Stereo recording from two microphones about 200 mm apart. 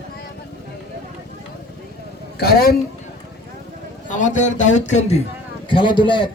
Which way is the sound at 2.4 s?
50° left (ahead or behind).